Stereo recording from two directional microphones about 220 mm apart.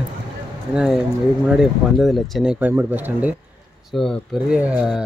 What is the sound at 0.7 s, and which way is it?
Speech, centre (ahead or behind).